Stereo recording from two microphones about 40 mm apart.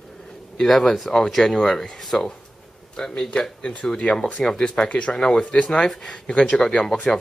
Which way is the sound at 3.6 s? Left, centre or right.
Left.